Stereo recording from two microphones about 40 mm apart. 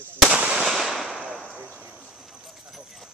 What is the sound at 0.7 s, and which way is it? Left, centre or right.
Fireworks, centre.